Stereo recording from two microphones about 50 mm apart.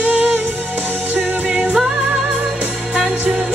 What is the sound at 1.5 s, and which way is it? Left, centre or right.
Music, right.